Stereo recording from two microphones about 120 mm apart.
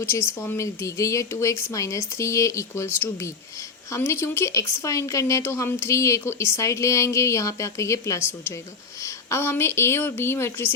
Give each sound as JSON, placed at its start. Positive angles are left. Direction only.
{"t": 0.0, "sound": "speech", "side_deg": 20}